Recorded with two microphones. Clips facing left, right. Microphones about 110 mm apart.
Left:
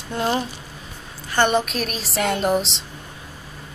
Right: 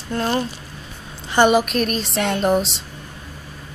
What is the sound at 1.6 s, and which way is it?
Speech, centre (ahead or behind).